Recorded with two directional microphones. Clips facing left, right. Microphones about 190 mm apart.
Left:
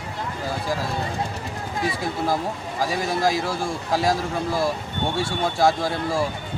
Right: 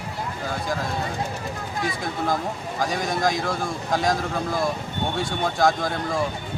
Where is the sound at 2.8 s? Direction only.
5° left (ahead or behind).